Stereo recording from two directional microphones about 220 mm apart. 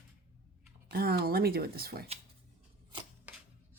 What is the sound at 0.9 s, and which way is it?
Speech, 45° right (ahead or behind).